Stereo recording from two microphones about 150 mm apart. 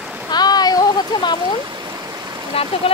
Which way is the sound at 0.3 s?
25° left (ahead or behind).